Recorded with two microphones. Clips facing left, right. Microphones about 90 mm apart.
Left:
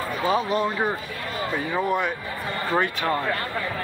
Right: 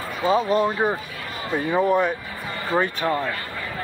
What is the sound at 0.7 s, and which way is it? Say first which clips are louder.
Speech: right 3 dB; 15° right (ahead or behind).